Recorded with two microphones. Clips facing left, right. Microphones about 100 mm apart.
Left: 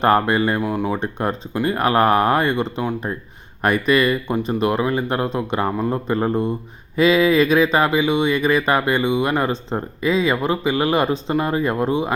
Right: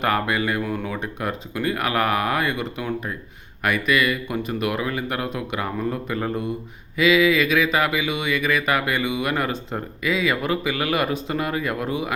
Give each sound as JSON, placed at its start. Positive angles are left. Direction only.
{"t": 0.0, "sound": "speech", "side_deg": 35}
{"t": 0.6, "sound": "speech", "side_deg": 20}
{"t": 0.9, "sound": "speech", "side_deg": 30}